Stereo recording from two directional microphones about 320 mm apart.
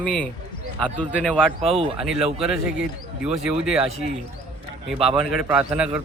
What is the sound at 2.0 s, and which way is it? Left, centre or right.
Speech, centre.